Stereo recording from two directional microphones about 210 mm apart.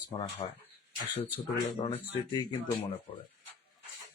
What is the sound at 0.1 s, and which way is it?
Speech, 25° left (ahead or behind).